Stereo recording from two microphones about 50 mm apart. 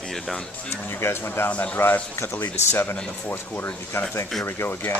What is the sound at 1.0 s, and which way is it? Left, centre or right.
Speech, left.